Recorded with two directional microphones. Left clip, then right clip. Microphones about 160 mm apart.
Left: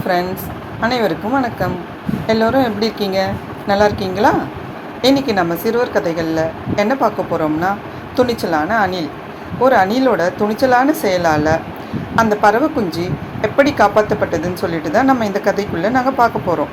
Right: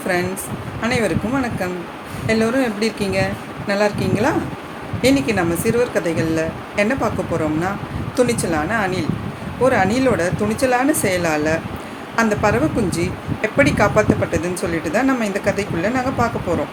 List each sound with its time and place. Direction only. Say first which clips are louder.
0.8 s speech: left 3 dB; centre (ahead or behind)